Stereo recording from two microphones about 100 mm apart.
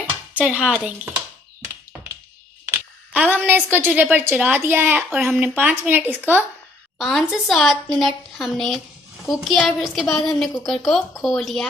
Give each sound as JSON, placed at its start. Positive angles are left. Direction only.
{"t": 0.3, "sound": "speech", "side_deg": -10}
{"t": 2.6, "sound": "a sound", "side_deg": -15}
{"t": 3.4, "sound": "a woman's voice", "side_deg": -20}
{"t": 7.0, "sound": "a woman's voice", "side_deg": 0}